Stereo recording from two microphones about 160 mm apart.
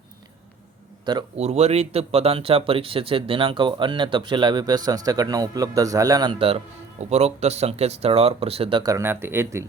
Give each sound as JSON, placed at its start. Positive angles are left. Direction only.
{"t": 1.4, "sound": "speech", "side_deg": -40}
{"t": 7.0, "sound": "speech", "side_deg": -40}
{"t": 8.8, "sound": "speech", "side_deg": -20}